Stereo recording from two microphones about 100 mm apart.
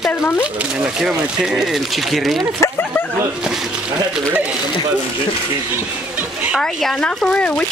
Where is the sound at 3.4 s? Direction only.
5° right (ahead or behind).